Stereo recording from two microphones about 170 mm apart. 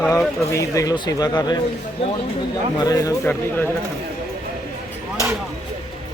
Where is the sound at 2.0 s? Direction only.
35° left (ahead or behind).